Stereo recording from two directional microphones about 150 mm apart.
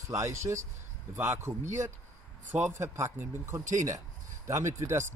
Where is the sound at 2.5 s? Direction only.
15° right (ahead or behind).